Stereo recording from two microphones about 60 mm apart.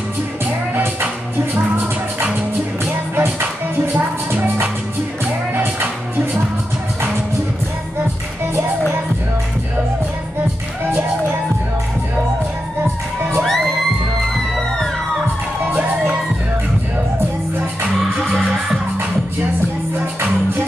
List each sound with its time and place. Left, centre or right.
3.2 s music: right
13.4 s crowd: centre